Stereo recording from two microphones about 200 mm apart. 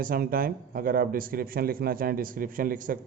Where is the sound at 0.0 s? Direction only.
45° right (ahead or behind).